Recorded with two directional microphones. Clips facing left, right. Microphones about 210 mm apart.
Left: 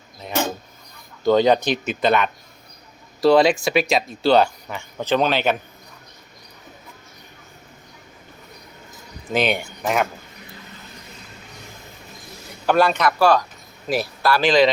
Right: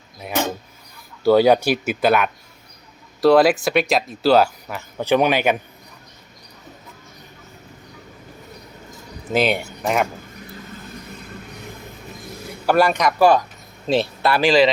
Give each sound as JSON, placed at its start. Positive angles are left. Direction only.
{"t": 0.2, "sound": "speech", "side_deg": -10}
{"t": 9.3, "sound": "speech", "side_deg": -5}
{"t": 12.6, "sound": "speech", "side_deg": -10}
{"t": 14.4, "sound": "speech", "side_deg": -5}